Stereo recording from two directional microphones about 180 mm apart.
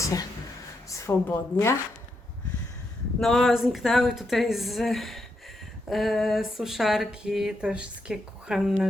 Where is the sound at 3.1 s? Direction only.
Centre (ahead or behind).